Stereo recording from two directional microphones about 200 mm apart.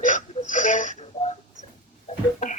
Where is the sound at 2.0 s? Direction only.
40° left (ahead or behind).